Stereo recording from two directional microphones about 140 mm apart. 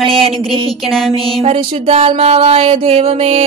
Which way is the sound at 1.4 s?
45° right (ahead or behind).